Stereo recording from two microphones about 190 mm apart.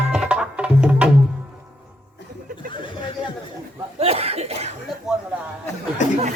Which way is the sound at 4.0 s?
30° right (ahead or behind).